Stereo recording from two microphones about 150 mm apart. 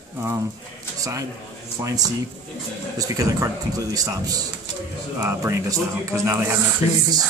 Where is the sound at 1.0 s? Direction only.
20° right (ahead or behind).